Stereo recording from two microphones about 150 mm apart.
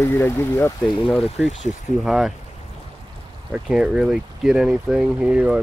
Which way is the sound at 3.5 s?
5° right (ahead or behind).